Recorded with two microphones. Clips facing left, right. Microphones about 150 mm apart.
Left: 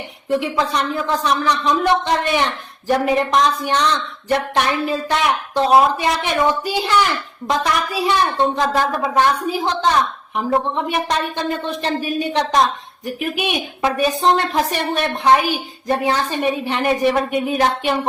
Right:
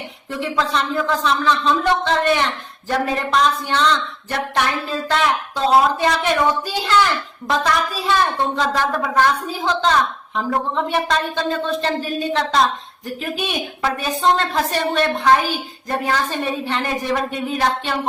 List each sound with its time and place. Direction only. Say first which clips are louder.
0.3 s a woman's voice: left 2 dB; 15° left (ahead or behind)